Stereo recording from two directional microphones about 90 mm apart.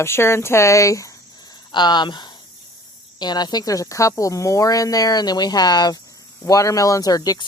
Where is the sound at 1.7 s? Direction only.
55° left (ahead or behind).